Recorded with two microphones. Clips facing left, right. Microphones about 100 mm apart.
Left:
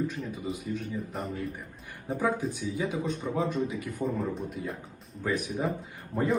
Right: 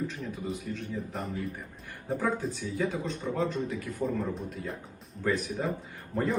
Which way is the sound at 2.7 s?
15° left (ahead or behind).